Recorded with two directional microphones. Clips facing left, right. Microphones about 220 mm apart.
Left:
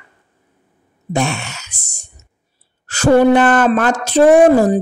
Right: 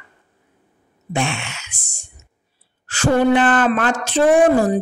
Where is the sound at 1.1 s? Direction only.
40° left (ahead or behind).